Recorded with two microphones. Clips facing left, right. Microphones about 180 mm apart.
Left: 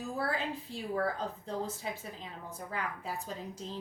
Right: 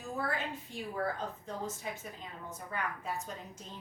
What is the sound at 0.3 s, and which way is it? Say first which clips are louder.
A woman's voice: left 2 dB; 35° left (ahead or behind).